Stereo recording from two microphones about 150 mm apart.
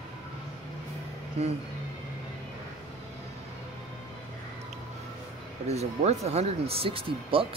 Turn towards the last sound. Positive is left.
turn(degrees=-35)  # may be behind; listen again after turning